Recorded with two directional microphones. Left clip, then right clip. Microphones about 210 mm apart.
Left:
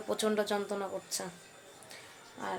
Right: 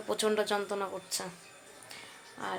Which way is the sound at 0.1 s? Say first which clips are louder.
Right 2 dB; 5° right (ahead or behind).